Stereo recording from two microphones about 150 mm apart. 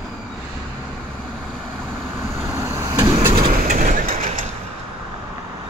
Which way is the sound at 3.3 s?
35° right (ahead or behind).